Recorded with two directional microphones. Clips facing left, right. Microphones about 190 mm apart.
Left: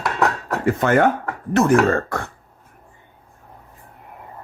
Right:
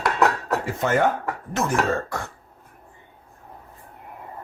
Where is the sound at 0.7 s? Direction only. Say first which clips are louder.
Left 7 dB; 60° left (ahead or behind).